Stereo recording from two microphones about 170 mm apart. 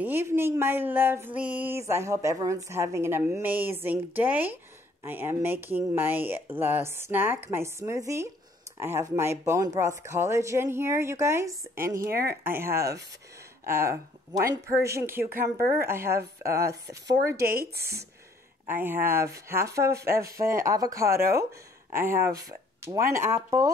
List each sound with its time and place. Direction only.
0.0 s speech: 15° right (ahead or behind)
12.1 s speech: 65° right (ahead or behind)
12.4 s speech: 15° right (ahead or behind)
16.1 s a woman's voice: 65° right (ahead or behind)
18.7 s speech: 10° right (ahead or behind)